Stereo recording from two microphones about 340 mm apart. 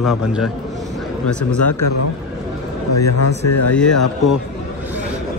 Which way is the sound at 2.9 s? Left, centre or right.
Left.